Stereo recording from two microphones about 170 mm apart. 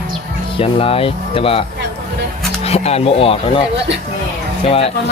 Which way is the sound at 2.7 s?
35° left (ahead or behind).